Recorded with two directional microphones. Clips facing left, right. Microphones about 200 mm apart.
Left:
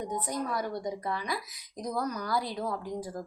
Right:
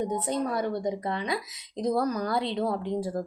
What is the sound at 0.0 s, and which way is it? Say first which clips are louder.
A woman's voice: right 5 dB; 25° right (ahead or behind).